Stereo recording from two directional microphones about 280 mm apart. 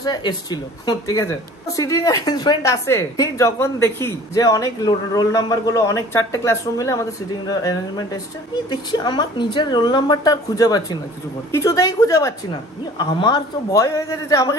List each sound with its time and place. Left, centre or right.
0.0 s a woman's voice: centre